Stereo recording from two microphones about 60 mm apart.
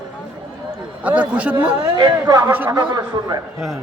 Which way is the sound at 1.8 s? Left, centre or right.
Right.